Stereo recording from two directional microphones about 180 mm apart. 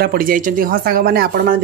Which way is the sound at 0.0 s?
55° right (ahead or behind).